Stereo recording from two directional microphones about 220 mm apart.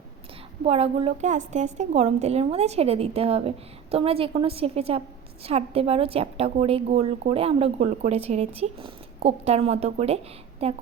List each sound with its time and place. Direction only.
0.6 s a woman's voice: 25° right (ahead or behind)